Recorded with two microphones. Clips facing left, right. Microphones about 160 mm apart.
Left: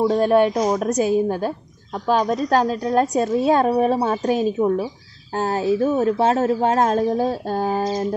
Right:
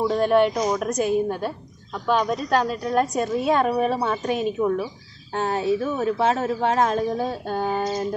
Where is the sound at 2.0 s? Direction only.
40° left (ahead or behind).